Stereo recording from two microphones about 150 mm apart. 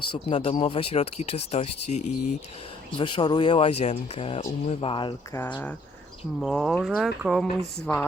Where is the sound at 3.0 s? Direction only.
30° left (ahead or behind).